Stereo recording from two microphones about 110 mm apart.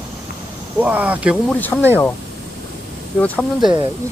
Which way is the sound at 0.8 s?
15° right (ahead or behind).